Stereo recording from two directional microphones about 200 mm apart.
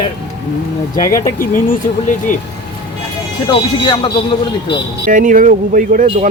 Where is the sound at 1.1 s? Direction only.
45° left (ahead or behind).